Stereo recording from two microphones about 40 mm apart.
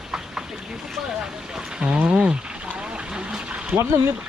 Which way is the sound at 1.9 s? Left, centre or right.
Right.